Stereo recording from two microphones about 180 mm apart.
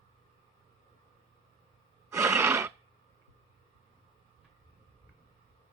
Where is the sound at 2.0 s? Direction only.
15° right (ahead or behind).